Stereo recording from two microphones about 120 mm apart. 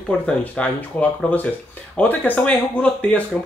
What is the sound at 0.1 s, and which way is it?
Speech, 10° left (ahead or behind).